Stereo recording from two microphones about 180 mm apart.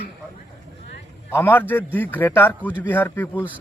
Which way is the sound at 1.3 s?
10° left (ahead or behind).